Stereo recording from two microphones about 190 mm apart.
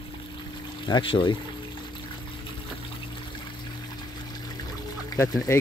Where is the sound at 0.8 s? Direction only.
25° left (ahead or behind).